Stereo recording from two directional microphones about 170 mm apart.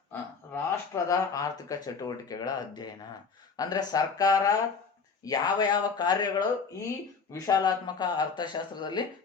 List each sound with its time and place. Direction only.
0.1 s speech: 15° left (ahead or behind)